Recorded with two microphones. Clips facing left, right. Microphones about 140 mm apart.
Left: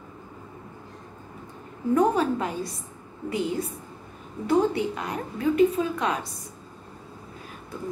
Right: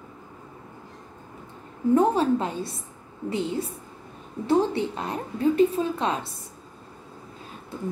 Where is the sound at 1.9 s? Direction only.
30° right (ahead or behind).